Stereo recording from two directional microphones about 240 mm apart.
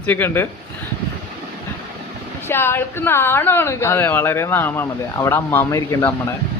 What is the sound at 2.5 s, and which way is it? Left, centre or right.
A woman's voice, centre.